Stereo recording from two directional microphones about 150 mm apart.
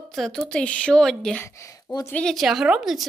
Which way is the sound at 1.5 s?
20° left (ahead or behind).